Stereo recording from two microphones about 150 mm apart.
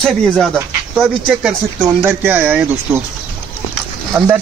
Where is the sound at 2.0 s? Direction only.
15° right (ahead or behind).